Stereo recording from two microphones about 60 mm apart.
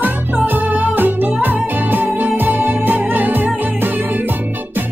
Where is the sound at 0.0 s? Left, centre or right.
Right.